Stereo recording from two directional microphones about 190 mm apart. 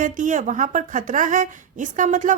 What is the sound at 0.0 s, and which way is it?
A woman's voice, 40° right (ahead or behind).